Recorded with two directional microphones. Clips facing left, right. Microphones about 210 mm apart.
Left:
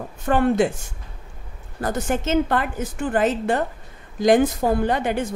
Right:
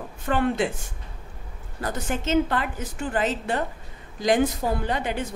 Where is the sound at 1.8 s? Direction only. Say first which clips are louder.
Left 5 dB; 45° left (ahead or behind).